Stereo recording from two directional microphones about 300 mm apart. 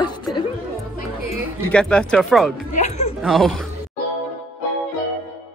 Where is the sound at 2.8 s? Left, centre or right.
Left.